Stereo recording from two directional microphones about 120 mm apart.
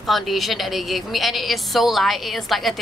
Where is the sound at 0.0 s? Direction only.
Centre (ahead or behind).